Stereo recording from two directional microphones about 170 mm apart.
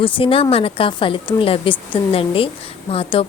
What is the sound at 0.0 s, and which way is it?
A woman's voice, 30° left (ahead or behind).